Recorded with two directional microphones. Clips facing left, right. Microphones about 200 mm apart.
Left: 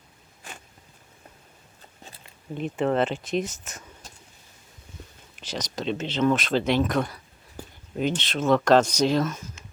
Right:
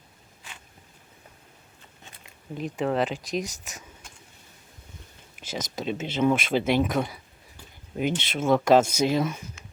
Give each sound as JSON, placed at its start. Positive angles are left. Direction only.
{"t": 0.4, "sound": "zipper", "side_deg": 45}
{"t": 2.6, "sound": "speech", "side_deg": 0}
{"t": 5.5, "sound": "speech", "side_deg": -10}
{"t": 7.6, "sound": "a sound", "side_deg": 45}
{"t": 7.9, "sound": "speech", "side_deg": -10}